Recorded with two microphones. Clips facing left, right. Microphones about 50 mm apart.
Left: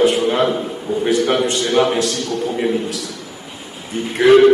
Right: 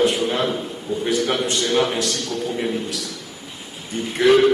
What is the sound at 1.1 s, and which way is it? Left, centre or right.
A man's voice, centre.